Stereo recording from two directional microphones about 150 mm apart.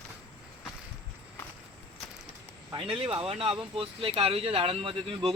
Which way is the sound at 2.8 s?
35° right (ahead or behind).